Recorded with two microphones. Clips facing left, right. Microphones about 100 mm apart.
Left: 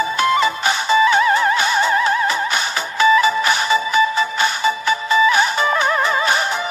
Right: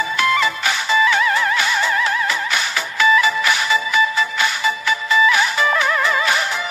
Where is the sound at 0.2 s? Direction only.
25° left (ahead or behind).